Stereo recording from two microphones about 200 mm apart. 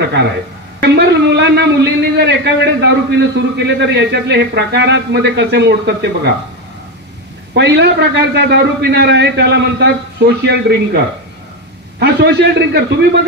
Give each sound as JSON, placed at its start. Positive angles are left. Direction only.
{"t": 0.8, "sound": "a man's voice", "side_deg": -55}
{"t": 7.5, "sound": "a man's voice", "side_deg": -60}
{"t": 12.0, "sound": "a man's voice", "side_deg": -55}